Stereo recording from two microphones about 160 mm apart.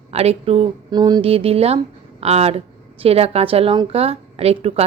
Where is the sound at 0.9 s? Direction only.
25° right (ahead or behind).